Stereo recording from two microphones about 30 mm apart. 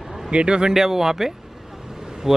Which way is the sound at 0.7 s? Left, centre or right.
Centre.